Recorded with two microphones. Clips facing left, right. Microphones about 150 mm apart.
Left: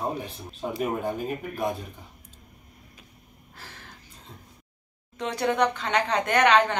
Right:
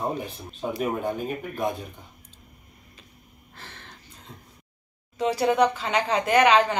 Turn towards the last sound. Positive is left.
turn(degrees=-5)  # may be behind; listen again after turning